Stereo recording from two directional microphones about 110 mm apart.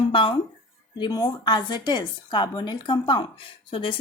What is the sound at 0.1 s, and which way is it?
Speech, 50° left (ahead or behind).